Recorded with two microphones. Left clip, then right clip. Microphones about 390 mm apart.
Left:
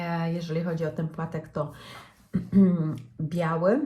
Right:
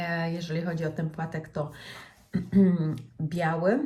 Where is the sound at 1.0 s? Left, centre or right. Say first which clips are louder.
Left 1 dB; right.